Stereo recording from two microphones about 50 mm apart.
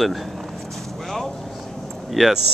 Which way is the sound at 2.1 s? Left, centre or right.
Centre.